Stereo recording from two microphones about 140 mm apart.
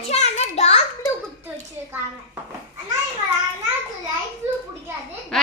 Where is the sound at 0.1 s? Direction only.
55° left (ahead or behind).